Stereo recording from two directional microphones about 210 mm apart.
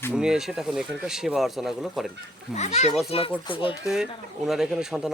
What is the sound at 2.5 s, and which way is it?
A child's voice, 30° left (ahead or behind).